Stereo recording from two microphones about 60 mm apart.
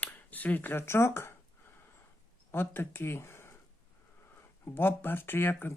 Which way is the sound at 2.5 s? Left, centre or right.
Left.